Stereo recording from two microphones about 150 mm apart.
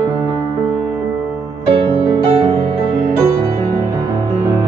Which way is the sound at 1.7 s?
35° right (ahead or behind).